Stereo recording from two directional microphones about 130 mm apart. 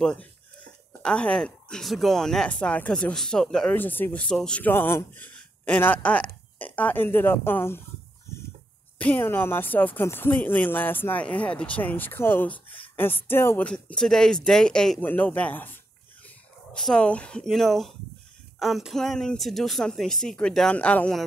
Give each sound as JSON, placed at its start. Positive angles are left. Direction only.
{"t": 0.0, "sound": "speech", "side_deg": 10}
{"t": 3.7, "sound": "a man's voice", "side_deg": 15}
{"t": 8.3, "sound": "a sound", "side_deg": 20}
{"t": 8.9, "sound": "a man's voice", "side_deg": 15}